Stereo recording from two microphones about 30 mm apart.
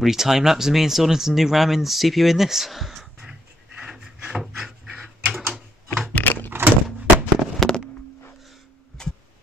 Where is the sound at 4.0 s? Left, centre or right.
Centre.